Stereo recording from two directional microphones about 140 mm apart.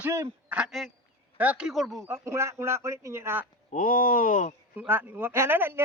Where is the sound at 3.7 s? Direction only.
75° left (ahead or behind).